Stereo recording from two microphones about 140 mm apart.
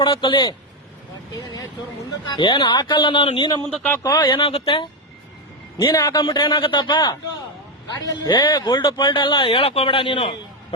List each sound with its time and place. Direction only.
0.0 s a man's voice: 35° left (ahead or behind)
2.3 s a man's voice: 35° left (ahead or behind)
3.7 s a man's voice: 10° left (ahead or behind)
4.0 s a man's voice: 30° left (ahead or behind)
5.9 s a man's voice: 25° left (ahead or behind)